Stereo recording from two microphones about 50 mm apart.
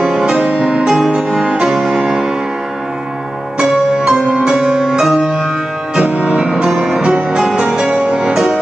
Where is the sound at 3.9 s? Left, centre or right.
Centre.